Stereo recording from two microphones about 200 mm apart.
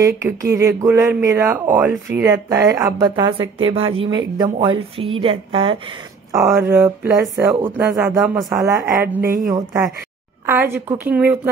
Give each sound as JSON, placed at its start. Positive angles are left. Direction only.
{"t": 0.0, "sound": "a woman's voice", "side_deg": -15}
{"t": 6.3, "sound": "speech", "side_deg": -15}
{"t": 8.6, "sound": "speech", "side_deg": -15}
{"t": 9.2, "sound": "speech", "side_deg": -45}
{"t": 9.5, "sound": "speech", "side_deg": -15}